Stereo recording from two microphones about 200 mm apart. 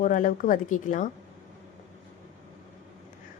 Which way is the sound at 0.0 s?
40° left (ahead or behind).